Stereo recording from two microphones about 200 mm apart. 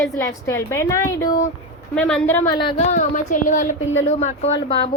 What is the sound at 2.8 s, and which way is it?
A woman's voice, 35° left (ahead or behind).